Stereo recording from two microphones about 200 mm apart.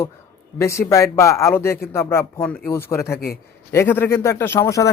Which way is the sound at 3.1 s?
50° left (ahead or behind).